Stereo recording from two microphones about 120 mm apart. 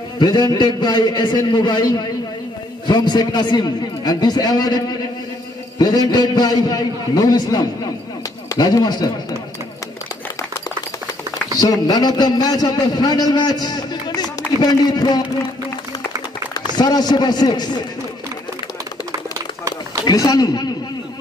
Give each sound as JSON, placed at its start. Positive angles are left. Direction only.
{"t": 0.2, "sound": "a man's voice", "side_deg": 35}
{"t": 11.5, "sound": "a man's voice", "side_deg": 30}
{"t": 16.5, "sound": "a man's voice", "side_deg": 35}
{"t": 19.3, "sound": "a sound", "side_deg": -25}
{"t": 20.1, "sound": "a man's voice", "side_deg": 35}